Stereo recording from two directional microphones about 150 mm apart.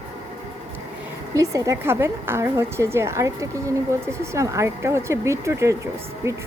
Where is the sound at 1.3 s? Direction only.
20° right (ahead or behind).